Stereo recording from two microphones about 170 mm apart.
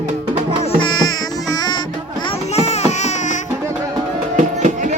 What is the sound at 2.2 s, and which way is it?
Music, 40° left (ahead or behind).